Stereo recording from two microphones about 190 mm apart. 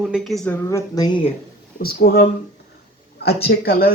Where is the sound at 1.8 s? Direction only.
55° left (ahead or behind).